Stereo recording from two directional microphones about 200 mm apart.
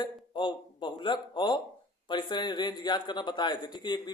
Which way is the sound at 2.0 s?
20° left (ahead or behind).